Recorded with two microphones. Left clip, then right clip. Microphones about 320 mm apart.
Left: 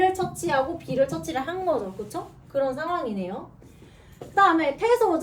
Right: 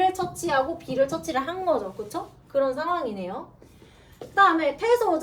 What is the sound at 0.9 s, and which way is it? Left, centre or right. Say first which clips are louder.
A woman's voice: right 1 dB; centre.